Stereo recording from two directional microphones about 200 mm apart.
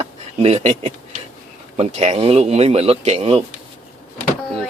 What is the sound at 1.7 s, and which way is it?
Speech, 35° right (ahead or behind).